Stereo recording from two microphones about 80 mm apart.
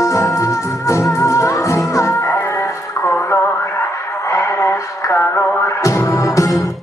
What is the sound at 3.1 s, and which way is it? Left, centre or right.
Radio, left.